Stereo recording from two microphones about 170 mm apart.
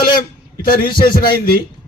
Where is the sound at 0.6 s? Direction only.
55° left (ahead or behind).